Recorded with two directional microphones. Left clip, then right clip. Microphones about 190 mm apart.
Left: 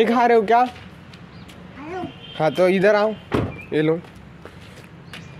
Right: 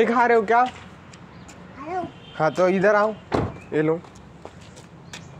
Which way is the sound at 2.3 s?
20° left (ahead or behind).